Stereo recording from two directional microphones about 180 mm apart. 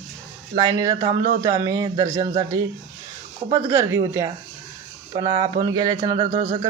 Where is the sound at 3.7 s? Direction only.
15° right (ahead or behind); by 6.3 s 30° right (ahead or behind).